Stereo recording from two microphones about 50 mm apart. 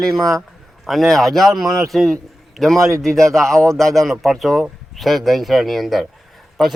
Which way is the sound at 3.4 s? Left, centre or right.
Right.